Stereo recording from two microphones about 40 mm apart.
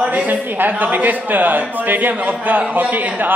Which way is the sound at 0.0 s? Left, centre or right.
Right.